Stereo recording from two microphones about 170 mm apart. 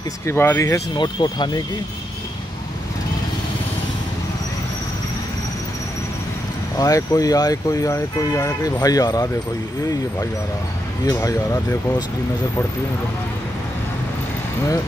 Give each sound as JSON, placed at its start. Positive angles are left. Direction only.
{"t": 0.3, "sound": "speech", "side_deg": 15}
{"t": 0.9, "sound": "speech", "side_deg": 25}
{"t": 6.8, "sound": "speech", "side_deg": 20}
{"t": 11.1, "sound": "speech", "side_deg": 20}